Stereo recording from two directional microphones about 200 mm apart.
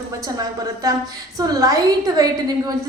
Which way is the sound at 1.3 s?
15° right (ahead or behind).